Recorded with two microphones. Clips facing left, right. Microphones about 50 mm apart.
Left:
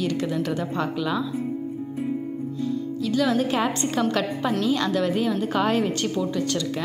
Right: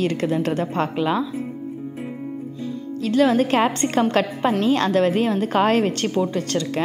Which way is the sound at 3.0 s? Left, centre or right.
Right.